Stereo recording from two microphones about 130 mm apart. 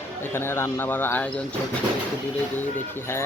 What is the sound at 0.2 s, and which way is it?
Speech, 20° left (ahead or behind).